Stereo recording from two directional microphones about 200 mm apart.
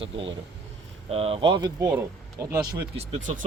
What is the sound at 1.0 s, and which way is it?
Speech, 30° right (ahead or behind).